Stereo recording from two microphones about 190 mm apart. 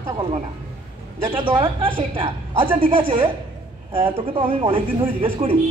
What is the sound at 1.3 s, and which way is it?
A woman's voice, 25° right (ahead or behind).